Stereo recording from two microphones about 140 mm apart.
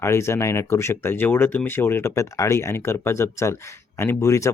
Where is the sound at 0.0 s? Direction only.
20° left (ahead or behind).